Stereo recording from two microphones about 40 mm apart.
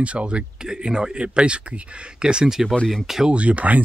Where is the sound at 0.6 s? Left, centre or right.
Centre.